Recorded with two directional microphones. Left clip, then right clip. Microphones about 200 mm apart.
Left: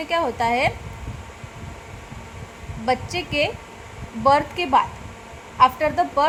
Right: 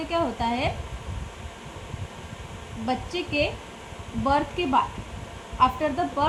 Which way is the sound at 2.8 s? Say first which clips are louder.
Left 6 dB; 40° left (ahead or behind).